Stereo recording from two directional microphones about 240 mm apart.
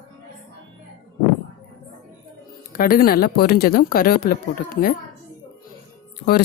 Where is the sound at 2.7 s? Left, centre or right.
Left.